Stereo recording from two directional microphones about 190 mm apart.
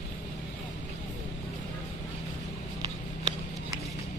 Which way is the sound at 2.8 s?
25° right (ahead or behind).